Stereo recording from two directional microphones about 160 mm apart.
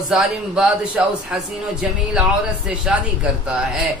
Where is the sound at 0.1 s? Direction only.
5° right (ahead or behind).